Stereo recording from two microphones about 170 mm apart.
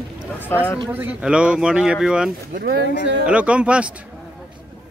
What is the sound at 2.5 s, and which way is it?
Speech, 75° right (ahead or behind).